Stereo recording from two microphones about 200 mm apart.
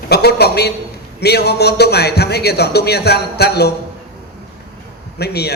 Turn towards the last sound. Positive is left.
turn(degrees=55)  # may be behind; listen again after turning